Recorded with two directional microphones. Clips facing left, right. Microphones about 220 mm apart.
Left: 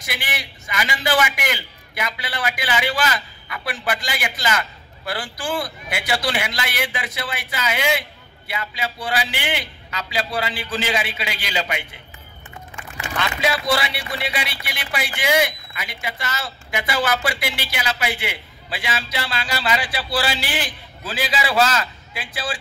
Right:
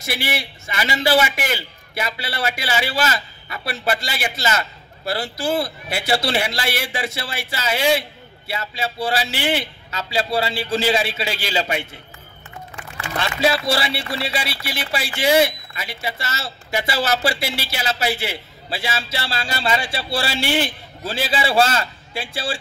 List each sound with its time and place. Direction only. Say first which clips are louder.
0.0 s speech: right 5 dB; 25° right (ahead or behind)
13.2 s speech: right 3 dB; 30° right (ahead or behind)